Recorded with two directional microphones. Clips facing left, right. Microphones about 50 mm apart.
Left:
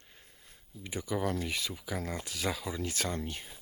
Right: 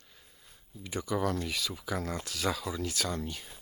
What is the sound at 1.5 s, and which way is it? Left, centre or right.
Speech, left.